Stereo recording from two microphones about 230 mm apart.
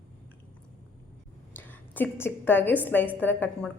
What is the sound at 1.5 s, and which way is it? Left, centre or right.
A woman's voice, centre.